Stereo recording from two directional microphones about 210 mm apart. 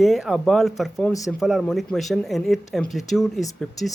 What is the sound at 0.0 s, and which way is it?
Speech, centre (ahead or behind).